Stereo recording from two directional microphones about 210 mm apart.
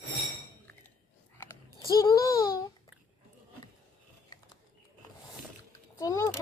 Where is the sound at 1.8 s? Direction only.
15° left (ahead or behind).